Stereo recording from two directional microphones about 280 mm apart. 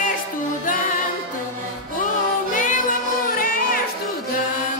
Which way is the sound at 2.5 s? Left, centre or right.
Left.